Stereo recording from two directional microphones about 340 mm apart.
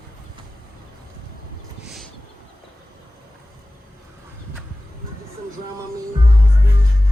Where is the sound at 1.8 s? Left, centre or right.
Centre.